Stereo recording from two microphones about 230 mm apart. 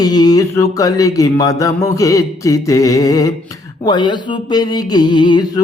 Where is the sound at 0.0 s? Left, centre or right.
Centre.